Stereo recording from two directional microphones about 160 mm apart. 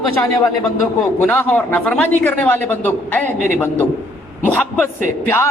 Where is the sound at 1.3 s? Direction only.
10° left (ahead or behind).